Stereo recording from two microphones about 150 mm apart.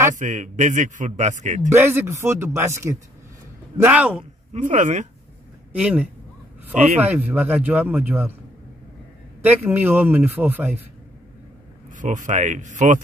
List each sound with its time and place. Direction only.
0.1 s a man's voice: 55° right (ahead or behind)
1.7 s a man's voice: 15° right (ahead or behind)
4.5 s a man's voice: 55° right (ahead or behind)
5.7 s a man's voice: 10° right (ahead or behind)
9.4 s a man's voice: 10° right (ahead or behind)
12.0 s a man's voice: 55° right (ahead or behind)